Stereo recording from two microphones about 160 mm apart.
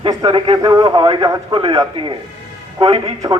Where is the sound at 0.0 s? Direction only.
25° right (ahead or behind).